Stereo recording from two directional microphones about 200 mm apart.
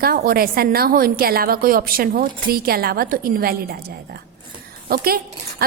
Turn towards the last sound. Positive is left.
turn(degrees=-50)  # may be behind; listen again after turning